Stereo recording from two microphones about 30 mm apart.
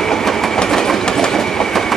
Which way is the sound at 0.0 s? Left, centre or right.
Centre.